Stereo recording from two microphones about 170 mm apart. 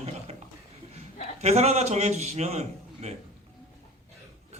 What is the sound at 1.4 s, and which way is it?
A man's voice, 40° right (ahead or behind).